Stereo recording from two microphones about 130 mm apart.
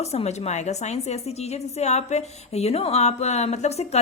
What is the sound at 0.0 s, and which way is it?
A woman's voice, 55° left (ahead or behind).